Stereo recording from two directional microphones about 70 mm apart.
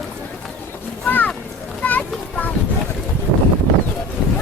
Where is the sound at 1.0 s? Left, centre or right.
Left.